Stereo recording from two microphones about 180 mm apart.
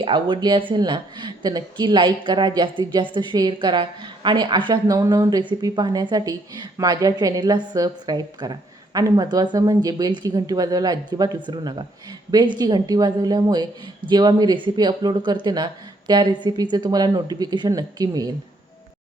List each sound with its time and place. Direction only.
0.0 s speech: 25° right (ahead or behind)